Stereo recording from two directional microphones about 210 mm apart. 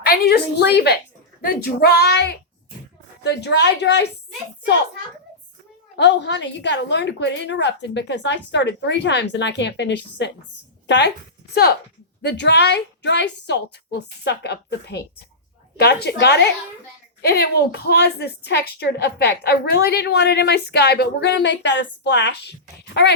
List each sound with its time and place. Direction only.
0.0 s a woman's voice: 50° left (ahead or behind)
6.0 s a woman's voice: 55° left (ahead or behind)
12.2 s a woman's voice: 55° left (ahead or behind)